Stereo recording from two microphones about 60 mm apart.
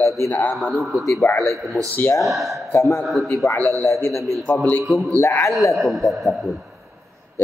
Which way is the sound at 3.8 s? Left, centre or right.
Left.